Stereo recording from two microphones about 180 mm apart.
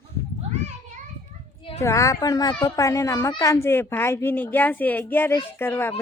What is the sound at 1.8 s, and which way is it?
Speech, 15° left (ahead or behind).